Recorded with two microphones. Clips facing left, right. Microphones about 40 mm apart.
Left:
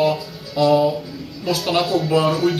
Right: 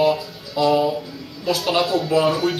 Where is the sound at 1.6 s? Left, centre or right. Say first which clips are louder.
Left 1 dB; centre.